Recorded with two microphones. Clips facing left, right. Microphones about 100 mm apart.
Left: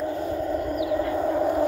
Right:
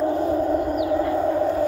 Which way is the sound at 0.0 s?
35° right (ahead or behind).